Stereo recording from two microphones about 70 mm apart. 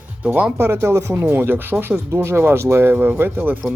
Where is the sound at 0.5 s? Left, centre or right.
Right.